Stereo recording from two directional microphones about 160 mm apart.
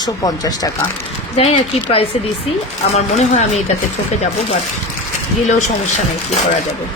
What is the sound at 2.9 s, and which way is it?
Speech, 45° left (ahead or behind).